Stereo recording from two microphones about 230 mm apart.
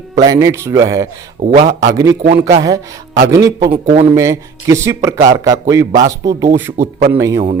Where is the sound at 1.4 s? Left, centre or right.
Right.